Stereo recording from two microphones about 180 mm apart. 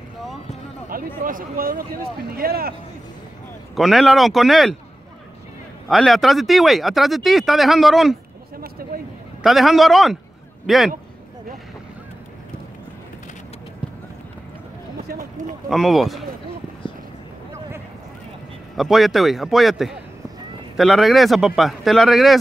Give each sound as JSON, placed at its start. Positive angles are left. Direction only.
{"t": 0.8, "sound": "speech", "side_deg": -50}
{"t": 3.7, "sound": "speech", "side_deg": 0}
{"t": 5.9, "sound": "speech", "side_deg": 0}
{"t": 8.5, "sound": "a sound", "side_deg": -55}
{"t": 9.4, "sound": "speech", "side_deg": 0}
{"t": 15.7, "sound": "speech", "side_deg": 0}
{"t": 16.8, "sound": "a sound", "side_deg": 30}
{"t": 18.8, "sound": "speech", "side_deg": 0}